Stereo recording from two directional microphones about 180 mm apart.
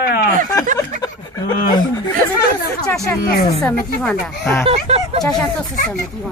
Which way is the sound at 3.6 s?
10° left (ahead or behind).